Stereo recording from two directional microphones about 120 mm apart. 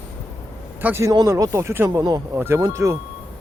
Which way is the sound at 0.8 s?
20° right (ahead or behind).